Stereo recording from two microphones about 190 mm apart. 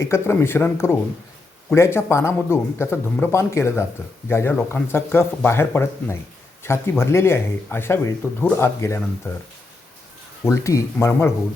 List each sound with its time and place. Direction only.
0.0 s speech: 15° left (ahead or behind)
10.4 s speech: 15° left (ahead or behind)